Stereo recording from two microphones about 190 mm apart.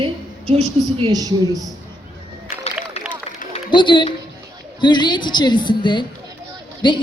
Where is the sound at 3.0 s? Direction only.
35° left (ahead or behind).